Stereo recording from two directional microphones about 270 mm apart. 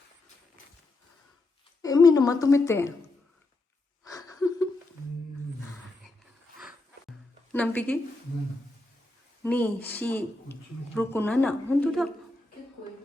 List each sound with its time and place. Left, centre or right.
1.8 s a woman's voice: centre
4.0 s a sound: centre
7.5 s speech: centre
9.4 s speech: centre